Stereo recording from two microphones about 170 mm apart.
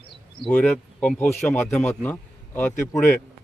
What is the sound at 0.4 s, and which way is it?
A man's voice, 10° left (ahead or behind).